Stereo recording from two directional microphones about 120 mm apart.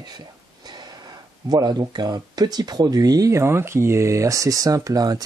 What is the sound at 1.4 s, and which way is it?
Speech, 35° right (ahead or behind).